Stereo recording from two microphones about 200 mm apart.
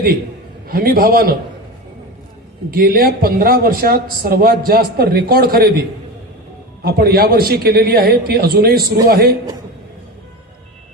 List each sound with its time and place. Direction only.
0.7 s a man's voice: 50° right (ahead or behind)
2.6 s a man's voice: 50° right (ahead or behind)
6.8 s a man's voice: 50° right (ahead or behind)